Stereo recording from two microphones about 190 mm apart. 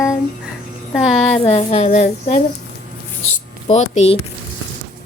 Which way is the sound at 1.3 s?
35° left (ahead or behind).